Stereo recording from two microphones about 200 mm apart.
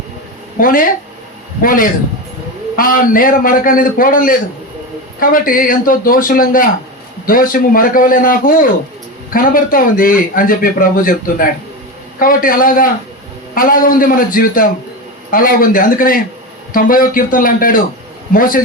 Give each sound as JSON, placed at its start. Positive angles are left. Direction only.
{"t": 0.6, "sound": "a man's voice", "side_deg": 45}